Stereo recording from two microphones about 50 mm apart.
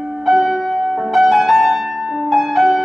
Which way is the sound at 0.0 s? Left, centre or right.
Centre.